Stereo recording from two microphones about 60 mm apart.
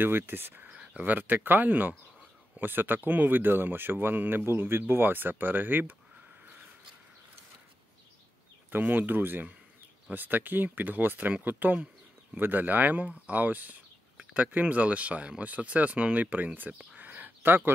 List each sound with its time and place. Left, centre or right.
0.0 s speech: right
0.7 s speech: right
8.6 s speech: right
16.7 s a sound: right